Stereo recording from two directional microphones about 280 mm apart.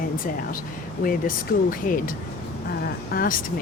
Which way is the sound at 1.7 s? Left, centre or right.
Left.